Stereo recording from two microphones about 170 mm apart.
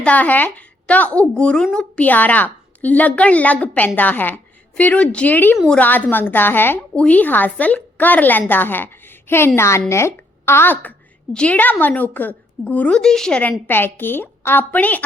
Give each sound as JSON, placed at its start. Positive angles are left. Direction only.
{"t": 0.0, "sound": "speech", "side_deg": 10}